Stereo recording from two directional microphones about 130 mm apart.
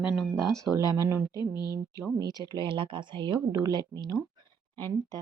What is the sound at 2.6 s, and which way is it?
Speech, 40° right (ahead or behind).